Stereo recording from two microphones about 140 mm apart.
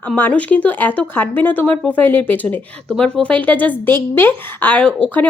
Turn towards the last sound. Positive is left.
turn(degrees=10)  # may be behind; listen again after turning